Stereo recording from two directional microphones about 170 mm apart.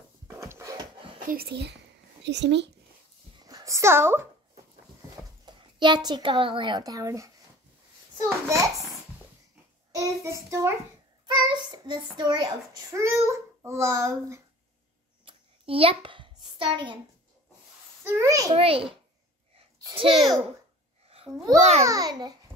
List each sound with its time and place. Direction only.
0.3 s a sound: 15° right (ahead or behind)
1.2 s a child's voice: 60° right (ahead or behind)
2.2 s speech: 90° right
3.3 s a woman's voice: 20° right (ahead or behind)
5.4 s a child's voice: 25° right (ahead or behind)
8.2 s children playing: 20° right (ahead or behind)
9.9 s child singing: 20° right (ahead or behind)
11.3 s a child's voice: 25° right (ahead or behind)
15.2 s a sound: 35° right (ahead or behind)
18.0 s a child's voice: 20° right (ahead or behind)
18.5 s a child's voice: 35° right (ahead or behind)
19.8 s a sound: 30° right (ahead or behind)
21.3 s a child's voice: centre (ahead or behind)
21.8 s a child's voice: 20° right (ahead or behind)